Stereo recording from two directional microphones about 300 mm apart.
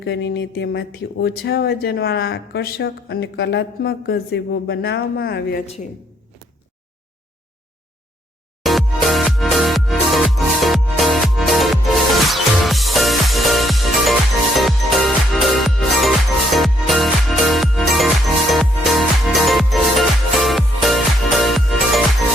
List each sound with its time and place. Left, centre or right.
0.0 s speech: left
8.6 s music: centre